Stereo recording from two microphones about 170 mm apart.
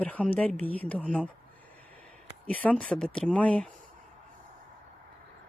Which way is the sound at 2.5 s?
10° left (ahead or behind).